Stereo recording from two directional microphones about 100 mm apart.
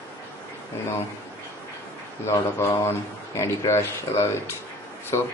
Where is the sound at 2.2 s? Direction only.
25° left (ahead or behind).